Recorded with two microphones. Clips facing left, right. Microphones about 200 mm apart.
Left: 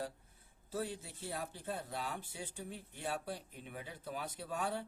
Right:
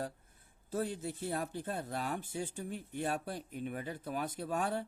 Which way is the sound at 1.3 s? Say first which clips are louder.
Right 2 dB; 50° right (ahead or behind).